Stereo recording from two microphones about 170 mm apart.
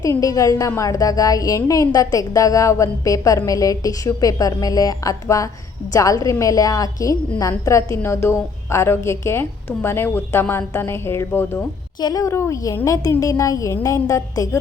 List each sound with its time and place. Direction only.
0.0 s a woman's voice: 20° left (ahead or behind)
11.9 s a woman's voice: 20° left (ahead or behind)